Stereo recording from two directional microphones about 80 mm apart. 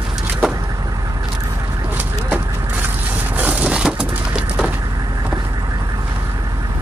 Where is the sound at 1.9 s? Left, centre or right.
Right.